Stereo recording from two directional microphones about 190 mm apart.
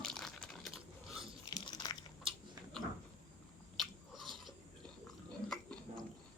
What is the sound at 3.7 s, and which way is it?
Biting, centre (ahead or behind).